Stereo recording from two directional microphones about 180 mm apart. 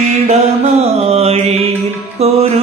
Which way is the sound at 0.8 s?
35° right (ahead or behind).